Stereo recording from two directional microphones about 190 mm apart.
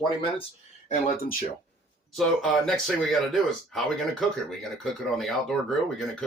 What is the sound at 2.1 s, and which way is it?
Speech, centre (ahead or behind).